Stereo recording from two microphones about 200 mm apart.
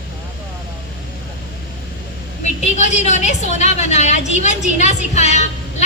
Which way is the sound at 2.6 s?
35° left (ahead or behind).